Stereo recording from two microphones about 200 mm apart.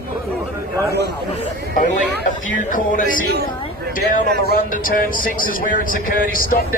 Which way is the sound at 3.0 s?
50° right (ahead or behind).